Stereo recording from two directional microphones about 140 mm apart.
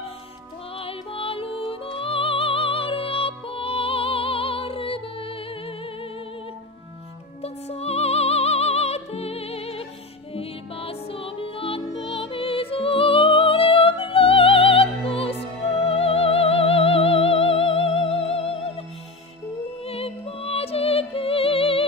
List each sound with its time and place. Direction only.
0.7 s music: 40° left (ahead or behind)
7.4 s music: 50° left (ahead or behind)